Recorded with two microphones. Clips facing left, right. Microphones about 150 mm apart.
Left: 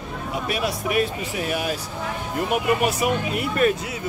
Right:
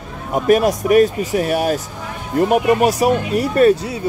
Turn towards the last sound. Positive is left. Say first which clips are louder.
# right 8 dB
turn(degrees=-35)  # may be behind; listen again after turning